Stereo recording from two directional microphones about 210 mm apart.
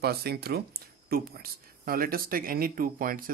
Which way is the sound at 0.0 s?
50° right (ahead or behind).